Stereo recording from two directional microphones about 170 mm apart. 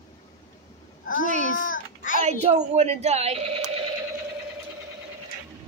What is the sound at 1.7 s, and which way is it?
Child singing, 55° left (ahead or behind).